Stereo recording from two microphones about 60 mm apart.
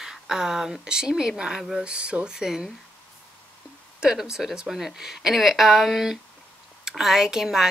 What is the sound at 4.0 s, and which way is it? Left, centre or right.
A woman's voice, centre.